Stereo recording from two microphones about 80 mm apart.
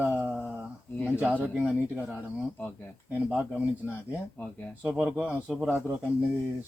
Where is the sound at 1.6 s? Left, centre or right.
Centre.